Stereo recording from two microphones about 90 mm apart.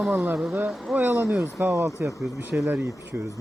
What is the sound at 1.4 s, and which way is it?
Speech, 30° right (ahead or behind).